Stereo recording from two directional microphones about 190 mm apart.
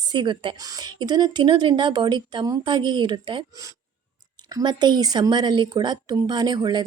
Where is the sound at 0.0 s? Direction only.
25° right (ahead or behind).